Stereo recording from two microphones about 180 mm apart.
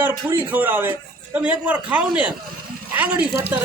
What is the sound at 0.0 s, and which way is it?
A man's voice, 10° right (ahead or behind).